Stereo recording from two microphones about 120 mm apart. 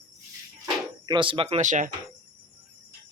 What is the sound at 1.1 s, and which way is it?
Speech, 45° right (ahead or behind).